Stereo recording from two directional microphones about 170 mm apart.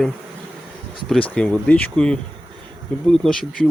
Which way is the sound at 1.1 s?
5° left (ahead or behind).